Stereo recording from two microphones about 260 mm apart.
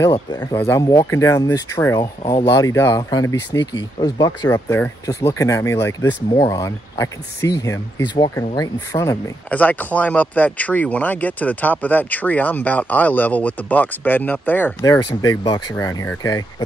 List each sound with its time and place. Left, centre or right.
0.0 s speech: centre